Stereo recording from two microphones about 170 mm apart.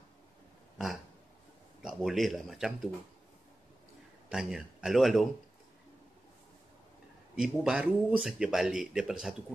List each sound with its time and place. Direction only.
1.8 s speech: 5° right (ahead or behind)
4.3 s speech: 5° right (ahead or behind)
7.3 s speech: 5° right (ahead or behind)